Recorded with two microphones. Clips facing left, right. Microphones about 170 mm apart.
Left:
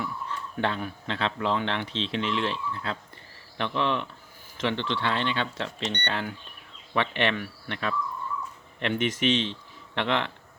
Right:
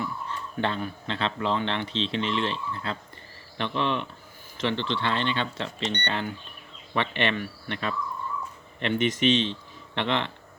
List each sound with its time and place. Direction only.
0.0 s a man's voice: 5° left (ahead or behind)